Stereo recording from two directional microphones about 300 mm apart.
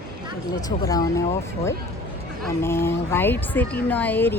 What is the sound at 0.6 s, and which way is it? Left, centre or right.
Speech, centre.